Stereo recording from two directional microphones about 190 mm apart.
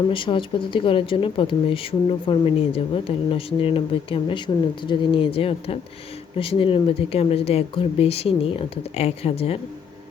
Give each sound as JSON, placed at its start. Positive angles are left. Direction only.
{"t": 0.1, "sound": "speech", "side_deg": 25}